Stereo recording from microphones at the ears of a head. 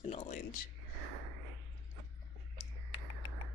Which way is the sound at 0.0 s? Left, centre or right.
Left.